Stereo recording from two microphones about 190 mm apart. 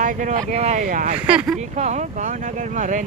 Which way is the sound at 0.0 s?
40° right (ahead or behind).